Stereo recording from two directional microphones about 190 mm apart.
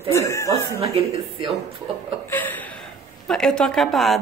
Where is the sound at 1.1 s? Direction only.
35° right (ahead or behind).